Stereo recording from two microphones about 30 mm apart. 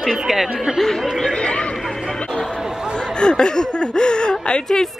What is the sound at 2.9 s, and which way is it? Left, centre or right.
Speech, left.